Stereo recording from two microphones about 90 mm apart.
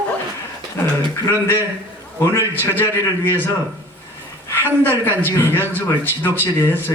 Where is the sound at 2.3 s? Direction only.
30° left (ahead or behind).